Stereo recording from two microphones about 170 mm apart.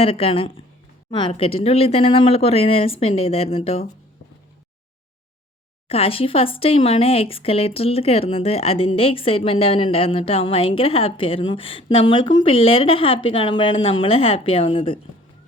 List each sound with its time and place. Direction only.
0.0 s speech: 35° left (ahead or behind)
5.9 s speech: 35° left (ahead or behind)